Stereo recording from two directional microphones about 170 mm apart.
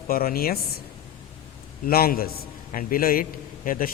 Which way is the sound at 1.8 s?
60° left (ahead or behind).